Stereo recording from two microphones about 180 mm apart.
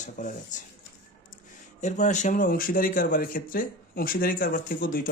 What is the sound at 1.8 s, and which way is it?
Speech, 40° left (ahead or behind).